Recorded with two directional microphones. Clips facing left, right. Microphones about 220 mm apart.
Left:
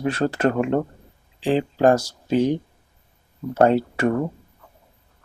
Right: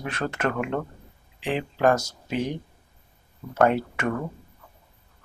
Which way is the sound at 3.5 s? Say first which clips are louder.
Left 4 dB; 30° left (ahead or behind).